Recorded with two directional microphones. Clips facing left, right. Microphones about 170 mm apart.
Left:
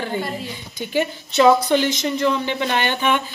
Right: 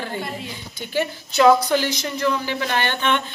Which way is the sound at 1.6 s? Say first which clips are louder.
Left 3 dB; 20° left (ahead or behind).